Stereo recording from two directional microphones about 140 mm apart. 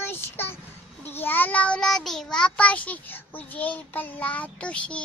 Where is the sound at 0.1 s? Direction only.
15° left (ahead or behind).